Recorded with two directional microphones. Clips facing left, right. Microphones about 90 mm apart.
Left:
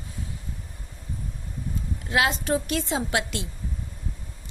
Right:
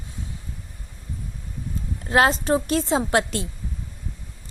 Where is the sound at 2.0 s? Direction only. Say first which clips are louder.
Right 5 dB; 40° right (ahead or behind).